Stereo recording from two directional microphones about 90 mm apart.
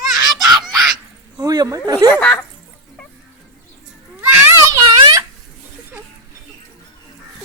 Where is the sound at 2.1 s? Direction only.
20° left (ahead or behind).